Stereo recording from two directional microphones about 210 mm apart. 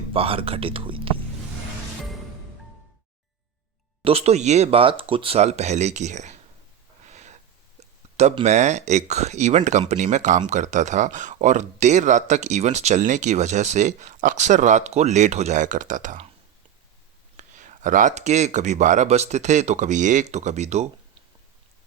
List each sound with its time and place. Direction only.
0.1 s speech: 25° right (ahead or behind)
4.0 s speech: 30° right (ahead or behind)
7.1 s a sound: 35° right (ahead or behind)
7.8 s speech: 30° right (ahead or behind)
17.3 s speech: 35° right (ahead or behind)